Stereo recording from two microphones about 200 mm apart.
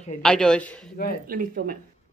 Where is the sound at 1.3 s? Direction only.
45° right (ahead or behind).